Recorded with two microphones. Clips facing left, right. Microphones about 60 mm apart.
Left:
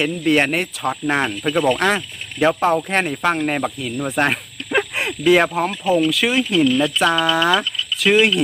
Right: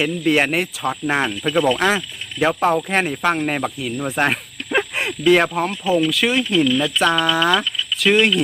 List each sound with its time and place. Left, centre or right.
0.0 s speech: centre